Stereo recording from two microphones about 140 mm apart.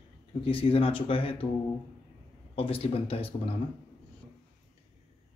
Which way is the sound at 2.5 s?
45° left (ahead or behind).